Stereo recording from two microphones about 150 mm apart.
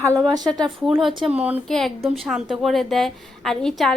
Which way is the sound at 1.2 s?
10° right (ahead or behind).